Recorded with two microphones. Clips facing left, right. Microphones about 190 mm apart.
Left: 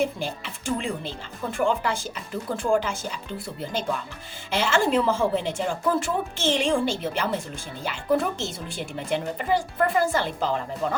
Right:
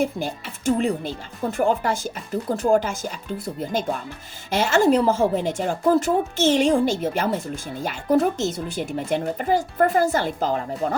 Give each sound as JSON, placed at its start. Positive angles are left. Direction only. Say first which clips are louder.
{"t": 0.0, "sound": "speech", "louder": "right 2 dB", "side_deg": -45}